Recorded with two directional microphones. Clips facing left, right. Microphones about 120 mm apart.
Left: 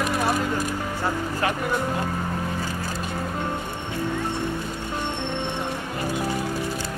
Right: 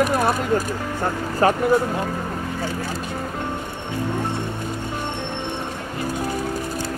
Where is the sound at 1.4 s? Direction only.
35° right (ahead or behind).